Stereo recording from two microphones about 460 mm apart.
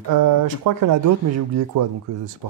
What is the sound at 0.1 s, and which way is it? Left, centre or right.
Speech, right.